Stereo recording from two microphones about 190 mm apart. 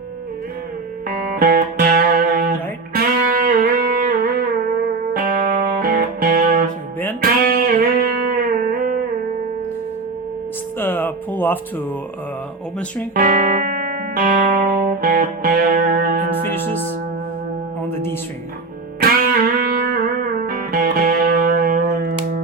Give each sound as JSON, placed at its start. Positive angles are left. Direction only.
{"t": 1.0, "sound": "music", "side_deg": -50}
{"t": 10.8, "sound": "a sound", "side_deg": 10}
{"t": 13.1, "sound": "music", "side_deg": -45}
{"t": 19.2, "sound": "music", "side_deg": -45}